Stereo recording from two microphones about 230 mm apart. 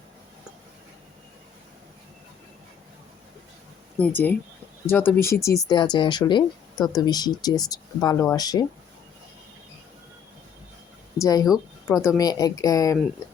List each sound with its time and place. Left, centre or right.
4.0 s speech: centre
11.2 s speech: centre